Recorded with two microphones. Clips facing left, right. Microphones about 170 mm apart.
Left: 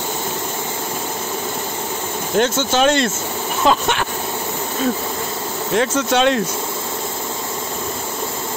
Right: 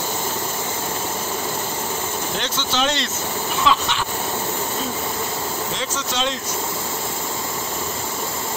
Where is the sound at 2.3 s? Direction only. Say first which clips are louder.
Left 11 dB; 50° left (ahead or behind).